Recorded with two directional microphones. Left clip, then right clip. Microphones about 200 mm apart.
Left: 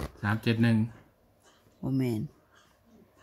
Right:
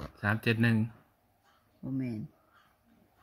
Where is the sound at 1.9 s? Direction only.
40° left (ahead or behind).